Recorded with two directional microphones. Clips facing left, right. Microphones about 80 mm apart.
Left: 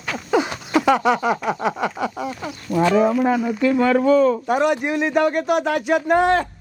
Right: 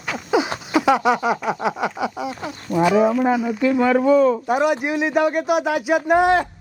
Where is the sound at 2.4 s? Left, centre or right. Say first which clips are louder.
Even; right.